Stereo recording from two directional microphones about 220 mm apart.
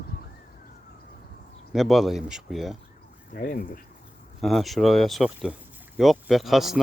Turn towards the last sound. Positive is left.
turn(degrees=0)  # may be behind; listen again after turning